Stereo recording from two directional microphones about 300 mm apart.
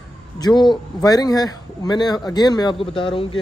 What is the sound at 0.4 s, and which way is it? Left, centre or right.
Speech, centre.